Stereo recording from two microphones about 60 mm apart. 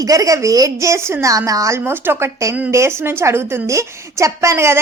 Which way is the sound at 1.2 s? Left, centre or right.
Right.